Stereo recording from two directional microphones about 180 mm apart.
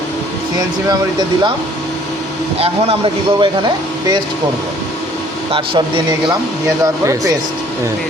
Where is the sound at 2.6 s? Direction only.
30° right (ahead or behind).